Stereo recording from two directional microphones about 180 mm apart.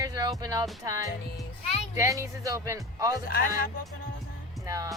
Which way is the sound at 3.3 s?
55° left (ahead or behind).